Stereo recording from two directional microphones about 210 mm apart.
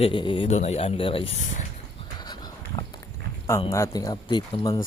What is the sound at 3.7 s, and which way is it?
Speech, 15° left (ahead or behind).